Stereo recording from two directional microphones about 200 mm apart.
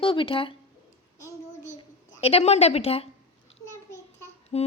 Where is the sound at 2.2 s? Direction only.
30° left (ahead or behind).